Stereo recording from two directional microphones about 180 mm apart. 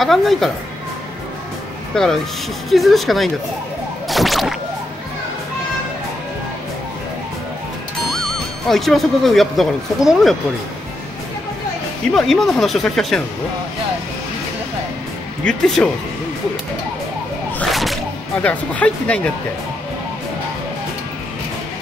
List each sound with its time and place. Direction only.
0.0 s speech: centre (ahead or behind)
2.0 s speech: 5° left (ahead or behind)
8.1 s speech: centre (ahead or behind)
12.1 s speech: centre (ahead or behind)
15.4 s speech: 5° left (ahead or behind)
17.6 s music: centre (ahead or behind)
18.4 s speech: 5° left (ahead or behind)